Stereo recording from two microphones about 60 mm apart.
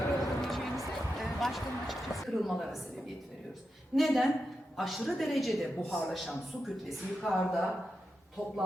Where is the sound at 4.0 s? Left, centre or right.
Centre.